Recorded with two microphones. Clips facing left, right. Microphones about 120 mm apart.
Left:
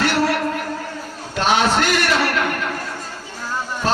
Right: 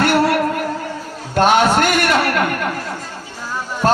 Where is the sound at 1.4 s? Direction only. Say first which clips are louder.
Right 4 dB; 50° right (ahead or behind).